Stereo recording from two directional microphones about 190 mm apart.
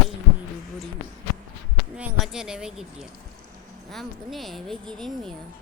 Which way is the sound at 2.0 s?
5° right (ahead or behind).